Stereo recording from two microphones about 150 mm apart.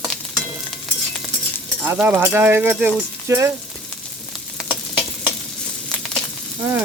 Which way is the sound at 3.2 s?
20° right (ahead or behind).